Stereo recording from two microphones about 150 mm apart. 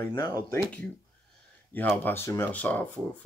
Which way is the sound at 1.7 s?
10° left (ahead or behind).